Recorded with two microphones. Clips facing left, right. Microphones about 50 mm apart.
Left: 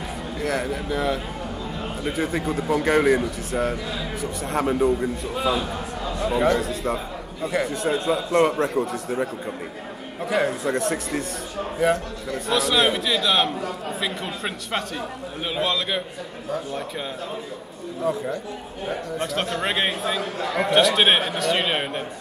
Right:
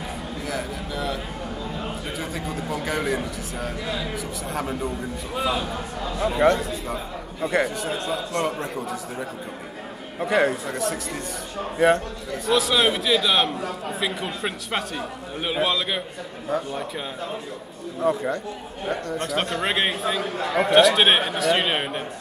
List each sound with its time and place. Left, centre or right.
0.4 s speech: left
0.7 s speech: centre
2.4 s a man's voice: centre
2.9 s speech: centre
3.9 s a man's voice: centre
4.6 s a man's voice: centre
5.3 s a man's voice: centre
10.2 s a man's voice: centre
19.3 s a man's voice: centre